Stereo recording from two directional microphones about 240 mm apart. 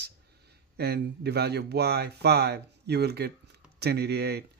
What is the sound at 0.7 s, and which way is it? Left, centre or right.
Speech, right.